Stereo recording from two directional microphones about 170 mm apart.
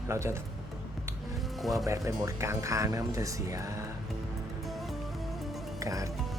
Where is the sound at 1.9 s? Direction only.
20° right (ahead or behind).